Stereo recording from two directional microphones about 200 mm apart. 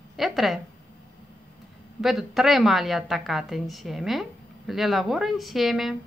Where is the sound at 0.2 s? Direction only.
Centre (ahead or behind).